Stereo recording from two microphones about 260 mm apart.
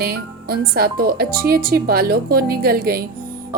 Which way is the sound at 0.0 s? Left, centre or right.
Right.